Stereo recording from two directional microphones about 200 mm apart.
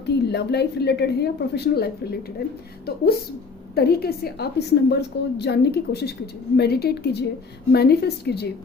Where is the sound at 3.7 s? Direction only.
50° left (ahead or behind).